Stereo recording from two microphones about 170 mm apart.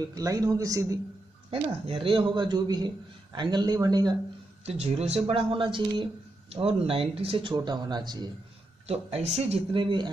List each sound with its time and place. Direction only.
0.1 s speech: 20° right (ahead or behind)
1.5 s speech: 30° right (ahead or behind)
4.6 s speech: 35° right (ahead or behind)
8.8 s speech: 40° right (ahead or behind)